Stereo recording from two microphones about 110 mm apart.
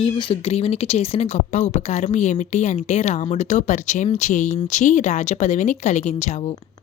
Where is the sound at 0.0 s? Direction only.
55° left (ahead or behind); by 6.5 s 90° left.